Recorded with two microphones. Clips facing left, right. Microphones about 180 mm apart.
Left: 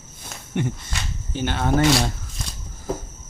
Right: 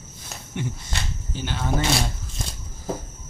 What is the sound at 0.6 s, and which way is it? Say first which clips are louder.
Speech: left 3 dB; 55° left (ahead or behind).